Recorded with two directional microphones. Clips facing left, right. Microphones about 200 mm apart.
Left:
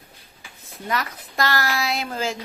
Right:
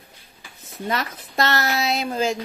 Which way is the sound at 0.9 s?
25° right (ahead or behind).